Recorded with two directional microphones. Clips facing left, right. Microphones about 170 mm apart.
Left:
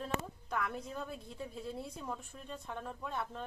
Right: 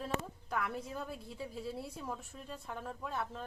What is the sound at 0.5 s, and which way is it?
A woman's voice, centre (ahead or behind).